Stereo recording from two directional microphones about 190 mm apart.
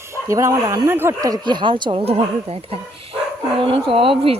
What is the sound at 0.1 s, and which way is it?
Speech, 15° right (ahead or behind).